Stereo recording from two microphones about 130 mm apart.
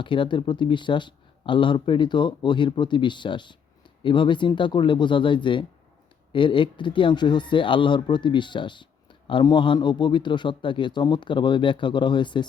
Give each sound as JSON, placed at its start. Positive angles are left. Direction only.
{"t": 0.0, "sound": "speech", "side_deg": 40}